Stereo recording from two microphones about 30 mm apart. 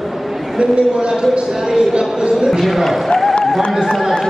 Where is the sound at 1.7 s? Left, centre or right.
Centre.